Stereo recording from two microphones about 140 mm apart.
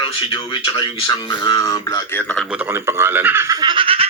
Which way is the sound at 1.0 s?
30° left (ahead or behind).